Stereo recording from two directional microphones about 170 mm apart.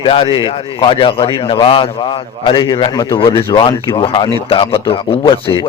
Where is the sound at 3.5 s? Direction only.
20° left (ahead or behind).